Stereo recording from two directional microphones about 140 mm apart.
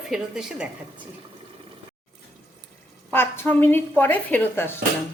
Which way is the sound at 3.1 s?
15° left (ahead or behind).